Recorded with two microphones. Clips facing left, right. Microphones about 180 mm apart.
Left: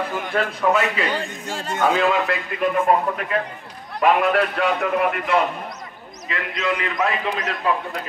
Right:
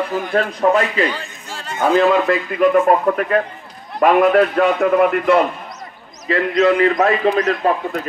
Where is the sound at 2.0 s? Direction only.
45° right (ahead or behind).